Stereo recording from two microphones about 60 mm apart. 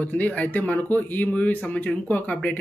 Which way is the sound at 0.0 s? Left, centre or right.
Left.